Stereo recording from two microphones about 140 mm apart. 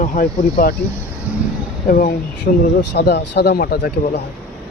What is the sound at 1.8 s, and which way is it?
Speech, 90° left.